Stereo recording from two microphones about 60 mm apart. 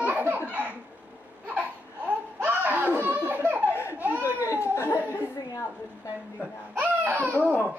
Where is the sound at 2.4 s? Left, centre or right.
Right.